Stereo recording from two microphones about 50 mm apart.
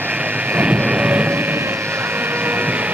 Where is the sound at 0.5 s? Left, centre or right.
Right.